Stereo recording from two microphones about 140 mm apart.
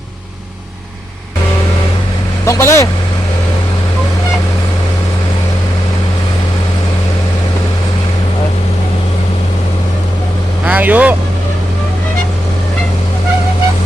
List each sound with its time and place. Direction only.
2.5 s speech: 20° left (ahead or behind)
10.7 s vehicle: 10° right (ahead or behind)